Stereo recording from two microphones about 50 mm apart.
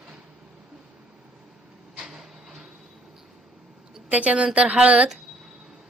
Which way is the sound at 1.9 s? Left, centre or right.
Centre.